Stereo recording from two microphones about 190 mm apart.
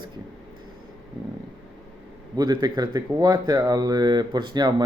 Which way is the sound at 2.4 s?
20° right (ahead or behind).